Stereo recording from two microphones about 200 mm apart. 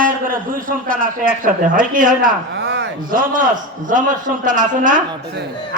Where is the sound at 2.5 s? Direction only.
60° right (ahead or behind).